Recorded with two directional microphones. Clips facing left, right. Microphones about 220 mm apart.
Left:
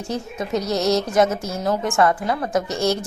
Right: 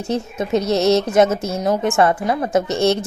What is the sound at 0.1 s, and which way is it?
A woman's voice, 25° right (ahead or behind).